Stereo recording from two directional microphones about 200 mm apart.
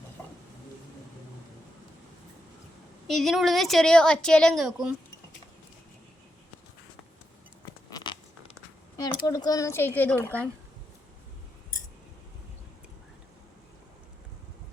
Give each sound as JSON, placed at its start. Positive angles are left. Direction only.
{"t": 3.1, "sound": "a woman's voice", "side_deg": 0}
{"t": 7.9, "sound": "a sound", "side_deg": 20}
{"t": 9.0, "sound": "a woman's voice", "side_deg": 20}
{"t": 10.2, "sound": "speech", "side_deg": -10}